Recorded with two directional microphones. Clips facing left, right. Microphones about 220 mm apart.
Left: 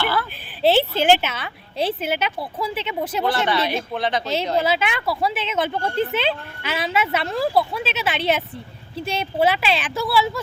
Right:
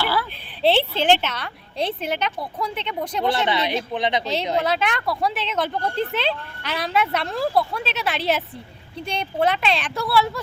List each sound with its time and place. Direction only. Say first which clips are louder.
0.0 s speech: left 1 dB; 10° right (ahead or behind)
0.6 s speech: left 2 dB; 5° left (ahead or behind)
3.2 s speech: even; 20° right (ahead or behind)
4.6 s speech: left 1 dB; 5° left (ahead or behind)